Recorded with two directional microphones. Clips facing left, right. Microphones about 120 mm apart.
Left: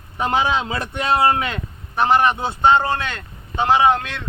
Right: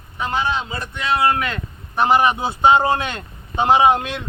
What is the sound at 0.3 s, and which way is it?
Speech, 90° left.